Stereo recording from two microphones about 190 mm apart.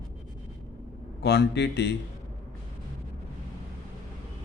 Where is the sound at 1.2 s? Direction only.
60° left (ahead or behind).